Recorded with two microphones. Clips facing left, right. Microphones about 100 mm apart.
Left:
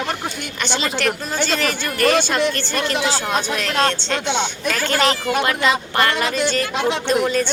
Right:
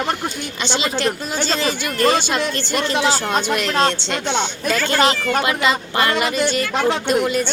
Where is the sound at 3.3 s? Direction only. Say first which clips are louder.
Right 2 dB; 5° right (ahead or behind).